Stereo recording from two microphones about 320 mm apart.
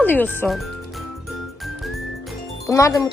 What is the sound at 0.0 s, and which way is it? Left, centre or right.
Speech, centre.